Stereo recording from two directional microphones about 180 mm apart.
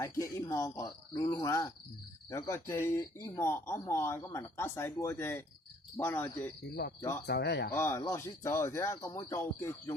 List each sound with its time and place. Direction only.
0.0 s speech: 20° left (ahead or behind)
7.3 s speech: 65° left (ahead or behind)
7.7 s speech: 15° left (ahead or behind)